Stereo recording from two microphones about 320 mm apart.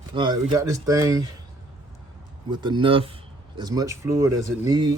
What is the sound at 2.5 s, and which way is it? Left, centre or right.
Speech, centre.